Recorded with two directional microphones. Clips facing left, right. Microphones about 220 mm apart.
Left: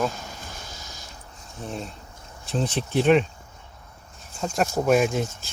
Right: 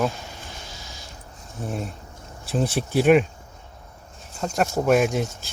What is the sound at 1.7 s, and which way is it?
Speech, 10° right (ahead or behind).